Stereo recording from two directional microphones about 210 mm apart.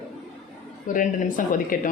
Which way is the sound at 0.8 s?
40° left (ahead or behind).